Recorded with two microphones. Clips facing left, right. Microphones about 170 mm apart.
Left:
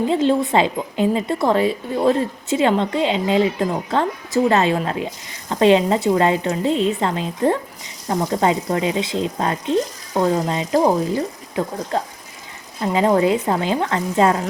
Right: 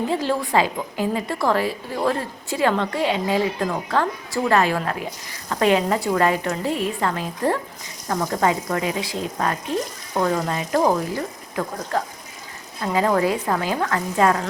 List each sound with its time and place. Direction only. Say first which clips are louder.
0.1 s a woman's voice: left 6 dB; 25° left (ahead or behind)